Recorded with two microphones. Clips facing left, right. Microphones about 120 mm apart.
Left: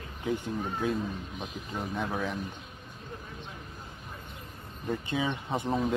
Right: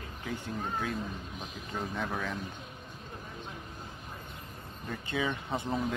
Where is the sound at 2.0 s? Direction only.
15° left (ahead or behind).